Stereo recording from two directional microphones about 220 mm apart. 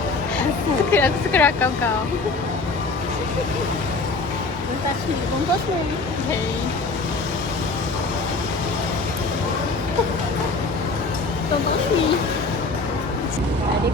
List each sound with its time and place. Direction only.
0.9 s speech: 10° left (ahead or behind)